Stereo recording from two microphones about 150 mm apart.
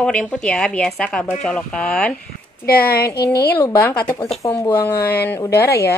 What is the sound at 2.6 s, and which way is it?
Speech, 90° left.